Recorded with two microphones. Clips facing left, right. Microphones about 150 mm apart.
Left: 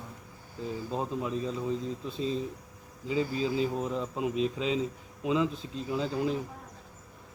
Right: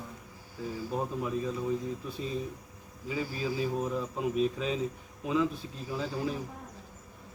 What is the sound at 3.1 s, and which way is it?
Speech, 25° left (ahead or behind).